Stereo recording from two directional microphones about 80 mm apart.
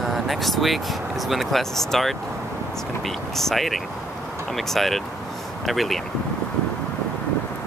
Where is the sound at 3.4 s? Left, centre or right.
Centre.